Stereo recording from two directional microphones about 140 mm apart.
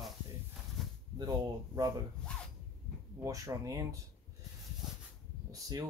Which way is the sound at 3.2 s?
25° right (ahead or behind).